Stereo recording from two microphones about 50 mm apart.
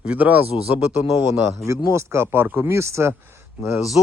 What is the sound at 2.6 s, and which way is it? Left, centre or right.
Speech, right.